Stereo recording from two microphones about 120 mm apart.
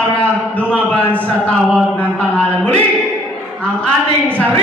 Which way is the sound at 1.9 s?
10° left (ahead or behind).